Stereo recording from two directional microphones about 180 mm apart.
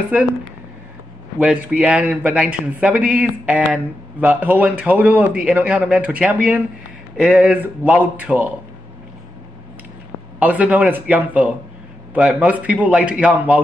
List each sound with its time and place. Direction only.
1.4 s speech: 5° right (ahead or behind)
10.4 s speech: 5° right (ahead or behind)